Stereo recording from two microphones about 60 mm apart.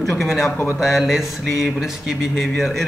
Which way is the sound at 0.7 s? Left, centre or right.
Centre.